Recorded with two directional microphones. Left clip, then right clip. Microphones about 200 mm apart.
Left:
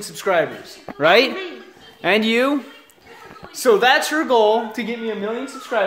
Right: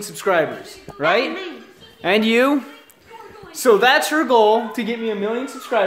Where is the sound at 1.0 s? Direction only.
55° left (ahead or behind).